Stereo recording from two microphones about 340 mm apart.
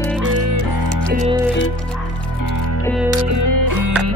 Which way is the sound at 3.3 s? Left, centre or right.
Right.